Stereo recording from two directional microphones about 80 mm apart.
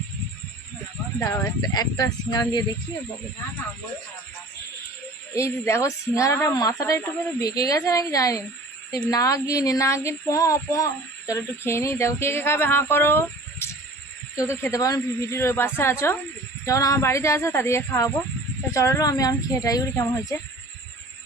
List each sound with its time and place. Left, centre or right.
1.2 s speech: left
1.6 s speech: left
5.3 s speech: left
16.6 s speech: left
20.1 s speech: left